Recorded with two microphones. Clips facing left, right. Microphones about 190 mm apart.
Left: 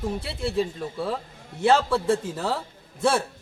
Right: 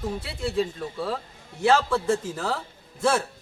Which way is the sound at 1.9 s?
5° left (ahead or behind).